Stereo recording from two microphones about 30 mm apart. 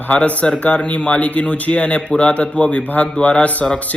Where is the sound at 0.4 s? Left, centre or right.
Left.